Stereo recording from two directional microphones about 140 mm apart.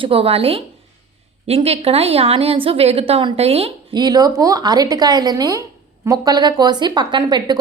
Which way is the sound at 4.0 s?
30° right (ahead or behind).